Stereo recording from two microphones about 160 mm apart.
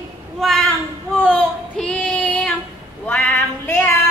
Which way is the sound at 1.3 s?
5° left (ahead or behind).